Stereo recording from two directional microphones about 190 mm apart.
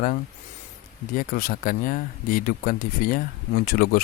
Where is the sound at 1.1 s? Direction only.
50° left (ahead or behind).